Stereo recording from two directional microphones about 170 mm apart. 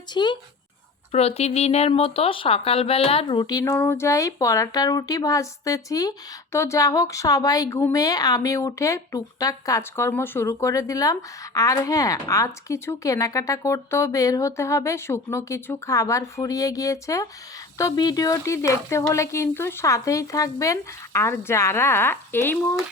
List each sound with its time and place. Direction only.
0.1 s speech: 25° left (ahead or behind)
1.1 s speech: 35° left (ahead or behind); by 22.5 s 15° left (ahead or behind)